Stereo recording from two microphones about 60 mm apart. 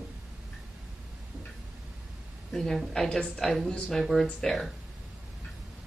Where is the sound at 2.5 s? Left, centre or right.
Centre.